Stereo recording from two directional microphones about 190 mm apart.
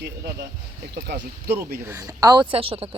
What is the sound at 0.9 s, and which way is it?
Speech, 55° right (ahead or behind).